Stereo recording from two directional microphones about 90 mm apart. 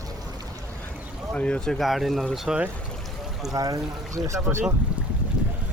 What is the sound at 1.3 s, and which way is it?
Speech, 10° left (ahead or behind).